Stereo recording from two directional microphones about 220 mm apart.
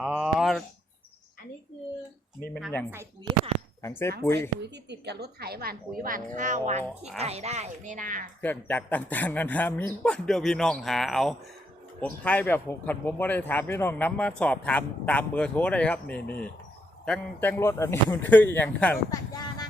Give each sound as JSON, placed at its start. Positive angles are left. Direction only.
{"t": 0.0, "sound": "a sound", "side_deg": -5}
{"t": 2.6, "sound": "speech", "side_deg": 0}
{"t": 3.8, "sound": "speech", "side_deg": 10}
{"t": 4.4, "sound": "a woman's voice", "side_deg": -50}
{"t": 8.4, "sound": "speech", "side_deg": 10}
{"t": 19.3, "sound": "a sound", "side_deg": 20}